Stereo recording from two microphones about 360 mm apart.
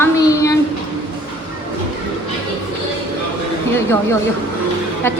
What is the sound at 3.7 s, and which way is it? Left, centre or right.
Speech, centre.